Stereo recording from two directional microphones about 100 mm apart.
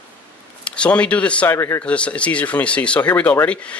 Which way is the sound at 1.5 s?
30° left (ahead or behind).